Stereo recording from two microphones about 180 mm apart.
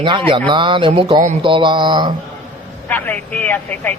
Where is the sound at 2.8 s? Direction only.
10° left (ahead or behind).